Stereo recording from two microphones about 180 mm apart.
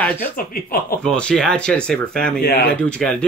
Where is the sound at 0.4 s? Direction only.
55° left (ahead or behind).